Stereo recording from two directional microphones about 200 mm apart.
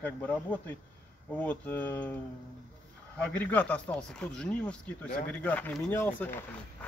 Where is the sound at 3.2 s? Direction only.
5° left (ahead or behind).